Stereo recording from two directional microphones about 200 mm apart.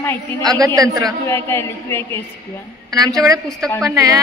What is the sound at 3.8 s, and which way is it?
Speech, 15° right (ahead or behind).